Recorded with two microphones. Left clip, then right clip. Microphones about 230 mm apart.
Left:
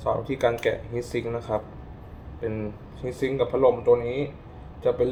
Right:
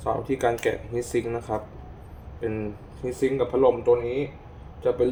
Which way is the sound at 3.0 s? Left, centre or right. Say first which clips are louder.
Right 1 dB; centre.